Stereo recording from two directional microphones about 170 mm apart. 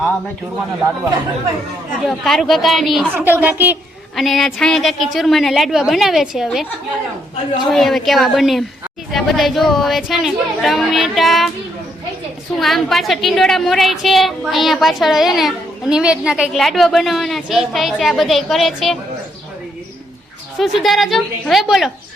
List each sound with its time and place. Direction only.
2.0 s a woman's voice: centre (ahead or behind)
3.1 s a woman's voice: 10° right (ahead or behind)
4.1 s a woman's voice: centre (ahead or behind)
12.5 s a woman's voice: centre (ahead or behind)
20.6 s a woman's voice: centre (ahead or behind)